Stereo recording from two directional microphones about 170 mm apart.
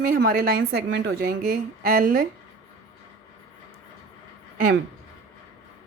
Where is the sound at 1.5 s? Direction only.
55° right (ahead or behind).